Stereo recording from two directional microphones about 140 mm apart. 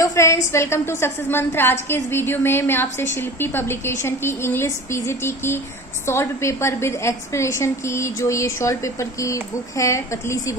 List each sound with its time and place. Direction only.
0.0 s a woman's voice: 20° left (ahead or behind)